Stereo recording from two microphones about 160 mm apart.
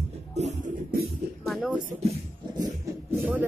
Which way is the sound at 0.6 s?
70° right (ahead or behind).